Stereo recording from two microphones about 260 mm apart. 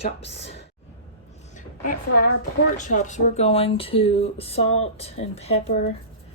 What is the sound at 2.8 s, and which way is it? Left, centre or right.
Speech, left.